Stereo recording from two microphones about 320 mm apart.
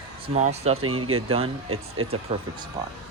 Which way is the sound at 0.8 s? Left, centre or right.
Right.